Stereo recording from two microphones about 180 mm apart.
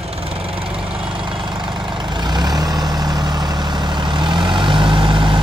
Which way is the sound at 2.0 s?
25° right (ahead or behind).